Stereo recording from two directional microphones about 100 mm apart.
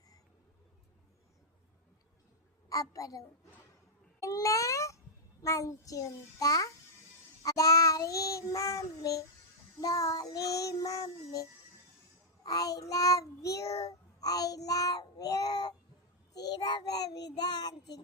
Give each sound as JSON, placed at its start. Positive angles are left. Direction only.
{"t": 2.6, "sound": "a woman's voice", "side_deg": 35}
{"t": 4.2, "sound": "babbling", "side_deg": 35}
{"t": 5.4, "sound": "child singing", "side_deg": 30}
{"t": 12.4, "sound": "child singing", "side_deg": 35}